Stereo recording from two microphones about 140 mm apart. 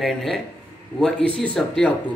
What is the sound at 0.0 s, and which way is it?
Speech, centre (ahead or behind).